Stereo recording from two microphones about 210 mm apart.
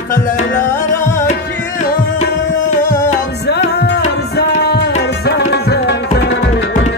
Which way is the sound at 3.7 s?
55° left (ahead or behind).